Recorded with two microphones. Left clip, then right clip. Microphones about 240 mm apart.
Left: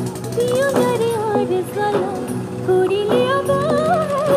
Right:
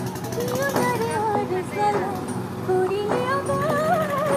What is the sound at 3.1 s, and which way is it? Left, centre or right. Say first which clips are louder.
Music: left 7 dB; left.